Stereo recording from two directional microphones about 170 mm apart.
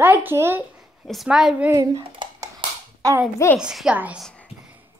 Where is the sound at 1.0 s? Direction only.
Centre (ahead or behind).